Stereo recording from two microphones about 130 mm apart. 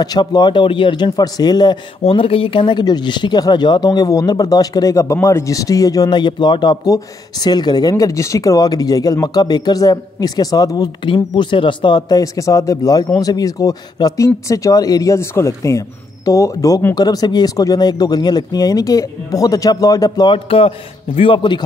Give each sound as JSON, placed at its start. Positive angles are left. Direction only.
{"t": 0.0, "sound": "speech", "side_deg": 30}
{"t": 2.0, "sound": "speech", "side_deg": 45}